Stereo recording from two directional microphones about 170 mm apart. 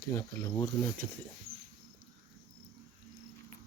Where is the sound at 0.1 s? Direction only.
15° left (ahead or behind).